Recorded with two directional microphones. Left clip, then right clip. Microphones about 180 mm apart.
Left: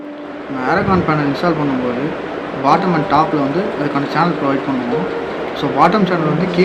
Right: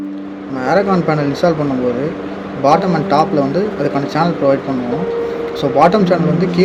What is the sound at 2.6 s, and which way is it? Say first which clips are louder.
Speech: right 1 dB; 50° right (ahead or behind).